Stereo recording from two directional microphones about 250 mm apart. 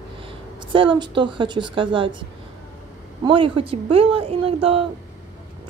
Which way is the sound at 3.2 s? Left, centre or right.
Right.